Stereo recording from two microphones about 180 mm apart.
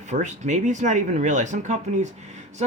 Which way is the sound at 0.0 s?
40° right (ahead or behind).